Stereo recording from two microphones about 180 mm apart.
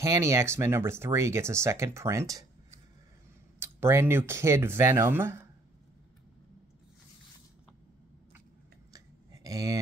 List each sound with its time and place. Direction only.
0.0 s speech: 15° right (ahead or behind)
3.5 s speech: 15° right (ahead or behind)
8.9 s a sound: 20° right (ahead or behind)